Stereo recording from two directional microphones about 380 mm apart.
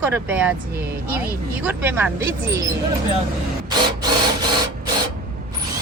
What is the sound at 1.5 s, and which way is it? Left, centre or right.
Speech, centre.